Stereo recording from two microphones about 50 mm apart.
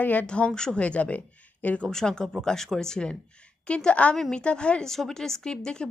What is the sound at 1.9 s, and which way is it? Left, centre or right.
A woman's voice, centre.